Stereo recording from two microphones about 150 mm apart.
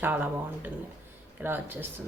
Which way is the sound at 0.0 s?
10° right (ahead or behind).